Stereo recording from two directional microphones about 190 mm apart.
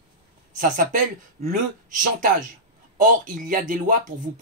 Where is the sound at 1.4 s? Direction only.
55° right (ahead or behind).